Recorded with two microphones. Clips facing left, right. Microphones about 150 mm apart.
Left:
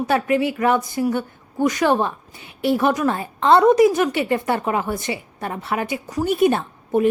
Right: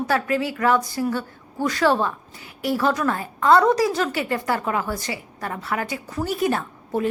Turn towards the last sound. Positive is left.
turn(degrees=20)  # may be behind; listen again after turning